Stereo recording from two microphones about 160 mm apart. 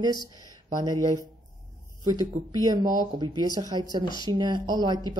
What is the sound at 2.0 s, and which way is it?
Speech, 25° right (ahead or behind).